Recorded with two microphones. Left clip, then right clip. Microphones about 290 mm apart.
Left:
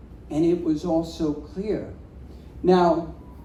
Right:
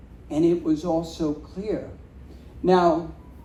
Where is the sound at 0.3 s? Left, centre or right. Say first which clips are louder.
Right 1 dB; right.